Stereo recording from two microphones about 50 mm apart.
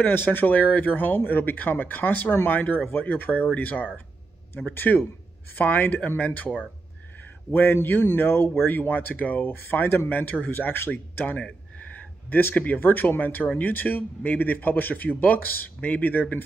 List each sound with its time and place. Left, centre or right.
0.0 s speech: left
7.5 s speech: left
10.9 s speech: left